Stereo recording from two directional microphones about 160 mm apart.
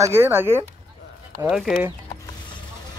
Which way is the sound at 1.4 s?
Centre (ahead or behind).